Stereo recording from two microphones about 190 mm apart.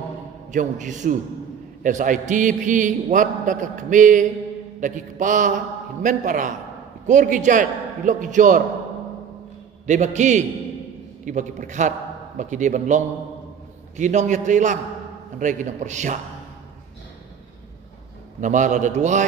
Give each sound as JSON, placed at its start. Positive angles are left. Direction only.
{"t": 0.5, "sound": "a man's voice", "side_deg": -40}
{"t": 9.8, "sound": "a man's voice", "side_deg": -40}
{"t": 18.4, "sound": "a man's voice", "side_deg": -40}